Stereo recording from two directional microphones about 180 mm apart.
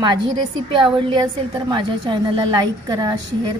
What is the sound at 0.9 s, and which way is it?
A woman's voice, 25° right (ahead or behind).